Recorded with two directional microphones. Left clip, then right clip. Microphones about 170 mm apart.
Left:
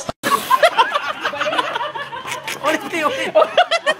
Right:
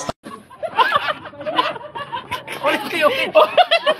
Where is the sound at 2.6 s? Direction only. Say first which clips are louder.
Right 2 dB; 20° left (ahead or behind).